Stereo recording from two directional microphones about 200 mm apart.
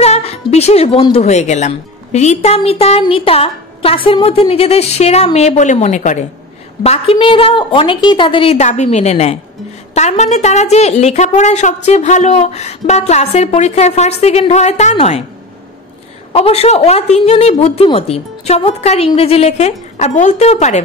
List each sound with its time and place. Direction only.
0.0 s a woman's voice: 30° left (ahead or behind)
16.3 s a woman's voice: 30° left (ahead or behind)